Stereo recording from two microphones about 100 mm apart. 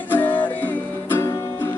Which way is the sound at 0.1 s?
20° left (ahead or behind).